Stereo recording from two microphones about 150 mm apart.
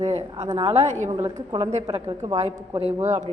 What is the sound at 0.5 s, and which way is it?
Speech, 35° right (ahead or behind).